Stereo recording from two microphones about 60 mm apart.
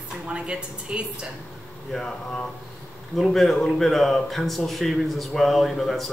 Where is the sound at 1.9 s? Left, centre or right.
Centre.